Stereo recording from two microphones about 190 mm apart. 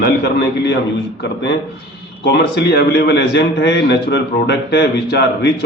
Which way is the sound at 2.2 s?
65° left (ahead or behind).